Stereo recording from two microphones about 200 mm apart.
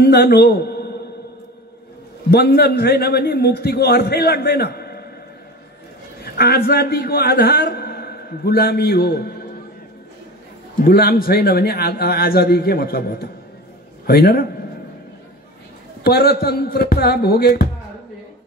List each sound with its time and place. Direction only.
0.0 s a sound: 55° left (ahead or behind)
2.3 s a man's voice: 50° left (ahead or behind)
6.2 s a man's voice: 50° left (ahead or behind)
10.8 s a man's voice: 50° left (ahead or behind)
16.0 s a man's voice: 50° left (ahead or behind)